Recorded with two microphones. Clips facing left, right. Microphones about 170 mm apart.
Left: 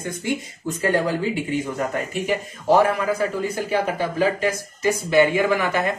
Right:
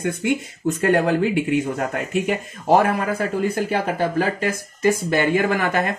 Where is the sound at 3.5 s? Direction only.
55° right (ahead or behind).